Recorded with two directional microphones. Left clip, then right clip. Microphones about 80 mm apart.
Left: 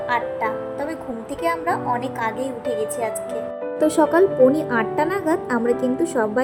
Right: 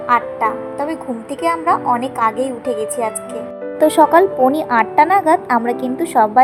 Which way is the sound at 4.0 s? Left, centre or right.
Right.